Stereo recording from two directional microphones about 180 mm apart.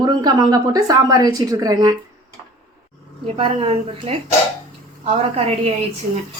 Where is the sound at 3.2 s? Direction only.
30° right (ahead or behind).